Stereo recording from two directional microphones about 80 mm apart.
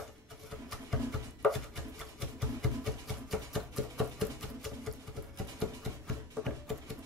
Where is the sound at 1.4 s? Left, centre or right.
Centre.